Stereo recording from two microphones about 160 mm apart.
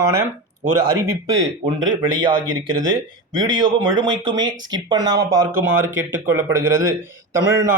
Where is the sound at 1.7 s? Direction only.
30° right (ahead or behind).